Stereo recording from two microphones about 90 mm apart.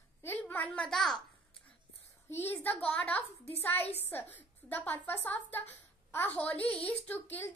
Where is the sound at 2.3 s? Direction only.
25° left (ahead or behind).